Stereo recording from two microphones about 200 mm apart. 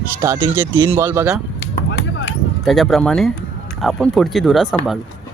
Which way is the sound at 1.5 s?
65° left (ahead or behind).